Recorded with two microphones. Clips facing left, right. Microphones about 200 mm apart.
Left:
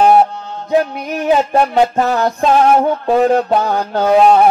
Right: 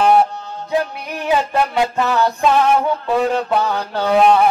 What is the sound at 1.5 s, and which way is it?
Music, 40° left (ahead or behind).